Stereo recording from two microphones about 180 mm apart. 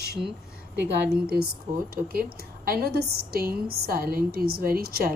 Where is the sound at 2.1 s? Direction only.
55° right (ahead or behind).